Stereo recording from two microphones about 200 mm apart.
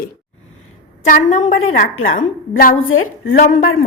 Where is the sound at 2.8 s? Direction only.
80° left.